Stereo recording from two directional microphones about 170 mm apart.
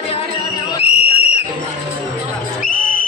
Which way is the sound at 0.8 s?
35° left (ahead or behind).